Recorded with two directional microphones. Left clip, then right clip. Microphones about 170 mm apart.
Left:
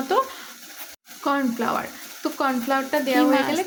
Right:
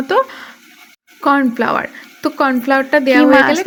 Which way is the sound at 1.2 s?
35° right (ahead or behind).